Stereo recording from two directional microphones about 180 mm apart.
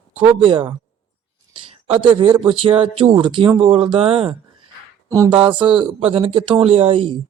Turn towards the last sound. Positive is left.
turn(degrees=-30)  # may be behind; listen again after turning